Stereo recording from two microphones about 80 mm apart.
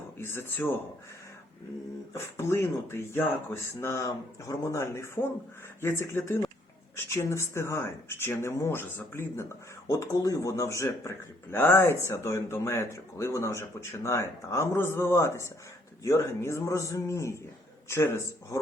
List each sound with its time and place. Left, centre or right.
0.2 s speech: left
2.1 s speech: left
9.9 s speech: left